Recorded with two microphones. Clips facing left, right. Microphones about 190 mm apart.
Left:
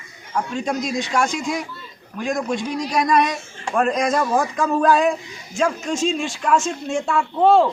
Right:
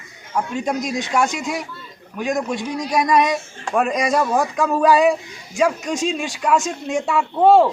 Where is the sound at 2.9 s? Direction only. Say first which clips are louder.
Right 2 dB; 15° right (ahead or behind).